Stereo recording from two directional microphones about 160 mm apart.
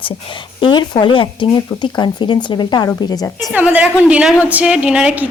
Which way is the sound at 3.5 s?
10° right (ahead or behind).